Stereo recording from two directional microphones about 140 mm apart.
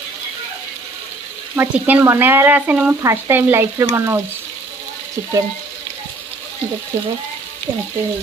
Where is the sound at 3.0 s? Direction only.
20° right (ahead or behind).